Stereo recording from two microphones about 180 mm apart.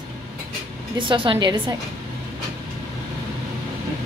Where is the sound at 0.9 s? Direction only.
30° right (ahead or behind).